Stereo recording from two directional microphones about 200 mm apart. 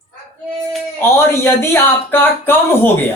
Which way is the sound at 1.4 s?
10° left (ahead or behind).